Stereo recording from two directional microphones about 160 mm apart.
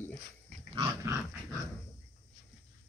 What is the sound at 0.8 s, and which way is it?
Dog, 15° right (ahead or behind).